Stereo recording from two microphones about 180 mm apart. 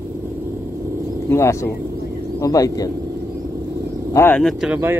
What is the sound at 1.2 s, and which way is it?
Speech, 15° left (ahead or behind).